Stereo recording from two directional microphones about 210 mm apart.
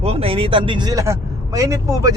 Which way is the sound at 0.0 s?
25° right (ahead or behind).